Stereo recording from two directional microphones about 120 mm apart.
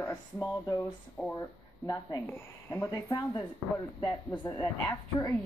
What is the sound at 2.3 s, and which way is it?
Speech, 20° left (ahead or behind).